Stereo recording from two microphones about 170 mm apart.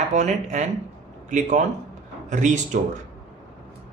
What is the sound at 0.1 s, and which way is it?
Speech, 45° right (ahead or behind).